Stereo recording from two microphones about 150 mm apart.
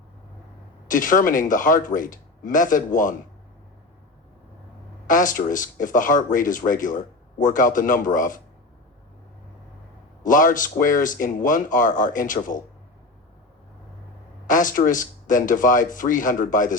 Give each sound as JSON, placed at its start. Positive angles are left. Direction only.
{"t": 0.9, "sound": "speech", "side_deg": 60}
{"t": 5.0, "sound": "speech", "side_deg": 60}
{"t": 10.2, "sound": "speech", "side_deg": 60}
{"t": 14.4, "sound": "speech", "side_deg": 60}